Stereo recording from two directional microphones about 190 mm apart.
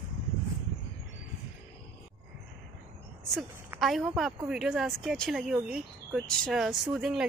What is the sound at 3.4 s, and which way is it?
A woman's voice, centre (ahead or behind).